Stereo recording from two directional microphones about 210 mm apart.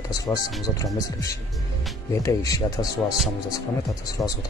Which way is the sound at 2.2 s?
15° left (ahead or behind).